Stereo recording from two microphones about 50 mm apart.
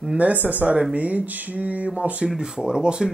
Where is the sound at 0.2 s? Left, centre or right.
Right.